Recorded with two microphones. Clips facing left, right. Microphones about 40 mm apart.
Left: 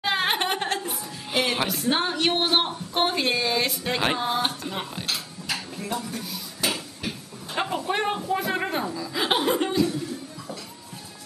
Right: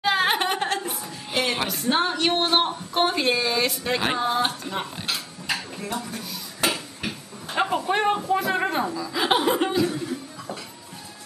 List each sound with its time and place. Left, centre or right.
0.0 s speech: centre
5.1 s a sound: centre
7.1 s speech: centre
9.8 s speech: right